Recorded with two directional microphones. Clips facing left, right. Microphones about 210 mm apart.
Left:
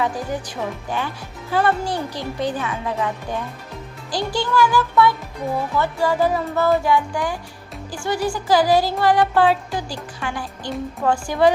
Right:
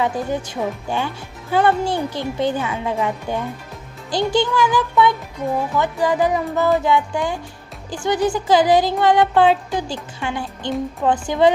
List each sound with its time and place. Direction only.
0.0 s speech: 25° right (ahead or behind)
5.7 s music: 15° right (ahead or behind)
6.8 s speech: 20° right (ahead or behind)